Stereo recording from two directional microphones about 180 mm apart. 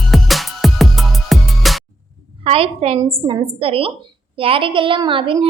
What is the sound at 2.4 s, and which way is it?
A woman's voice, 30° right (ahead or behind).